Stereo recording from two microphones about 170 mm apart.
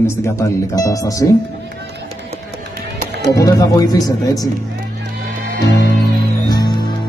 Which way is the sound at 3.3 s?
20° left (ahead or behind).